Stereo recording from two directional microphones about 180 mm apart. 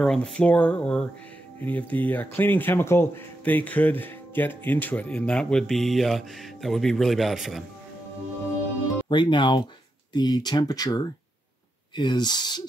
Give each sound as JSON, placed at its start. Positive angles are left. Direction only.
{"t": 0.0, "sound": "speech", "side_deg": 5}
{"t": 9.1, "sound": "speech", "side_deg": 25}